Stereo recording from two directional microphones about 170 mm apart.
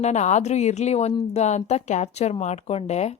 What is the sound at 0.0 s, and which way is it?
A woman's voice, 40° left (ahead or behind).